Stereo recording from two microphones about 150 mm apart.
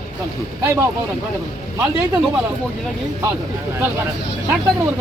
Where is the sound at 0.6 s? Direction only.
15° right (ahead or behind).